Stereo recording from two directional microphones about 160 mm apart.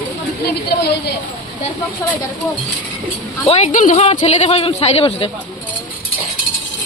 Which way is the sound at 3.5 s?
40° left (ahead or behind).